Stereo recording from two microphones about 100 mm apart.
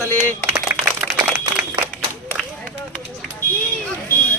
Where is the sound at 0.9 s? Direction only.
15° right (ahead or behind).